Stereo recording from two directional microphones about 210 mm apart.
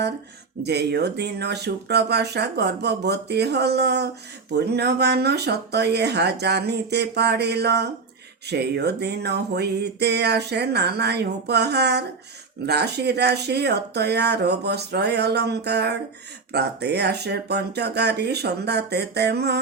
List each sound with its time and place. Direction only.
0.6 s music: 50° right (ahead or behind)